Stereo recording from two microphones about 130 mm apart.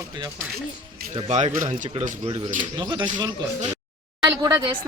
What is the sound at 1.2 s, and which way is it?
Speech, 65° right (ahead or behind).